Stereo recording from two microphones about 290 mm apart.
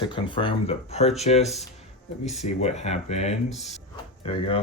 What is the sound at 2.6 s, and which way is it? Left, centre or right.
Speech, left.